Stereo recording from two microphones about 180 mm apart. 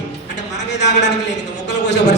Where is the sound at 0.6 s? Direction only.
75° left (ahead or behind).